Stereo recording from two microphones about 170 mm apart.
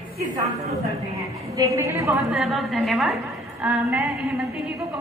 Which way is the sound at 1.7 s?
20° right (ahead or behind).